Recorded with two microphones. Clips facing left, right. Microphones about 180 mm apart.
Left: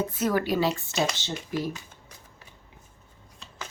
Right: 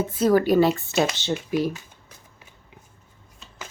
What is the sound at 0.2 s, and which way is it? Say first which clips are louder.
Speech: right 8 dB; 40° right (ahead or behind).